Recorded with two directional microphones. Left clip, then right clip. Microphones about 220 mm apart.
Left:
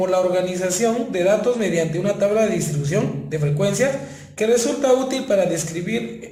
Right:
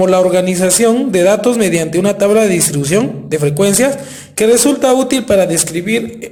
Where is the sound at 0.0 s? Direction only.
45° right (ahead or behind).